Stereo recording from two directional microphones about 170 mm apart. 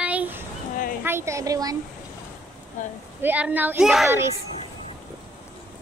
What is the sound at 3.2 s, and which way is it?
Speech, 10° right (ahead or behind).